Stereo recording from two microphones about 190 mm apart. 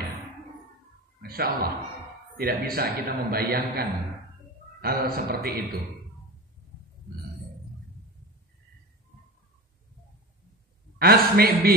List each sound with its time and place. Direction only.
1.2 s a man's voice: 55° right (ahead or behind)
4.8 s a man's voice: 55° right (ahead or behind)
11.0 s a man's voice: 55° right (ahead or behind)